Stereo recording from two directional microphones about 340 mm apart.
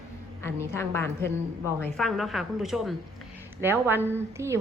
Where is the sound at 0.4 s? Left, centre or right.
Centre.